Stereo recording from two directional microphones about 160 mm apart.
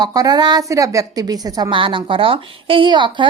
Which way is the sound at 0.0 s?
25° right (ahead or behind).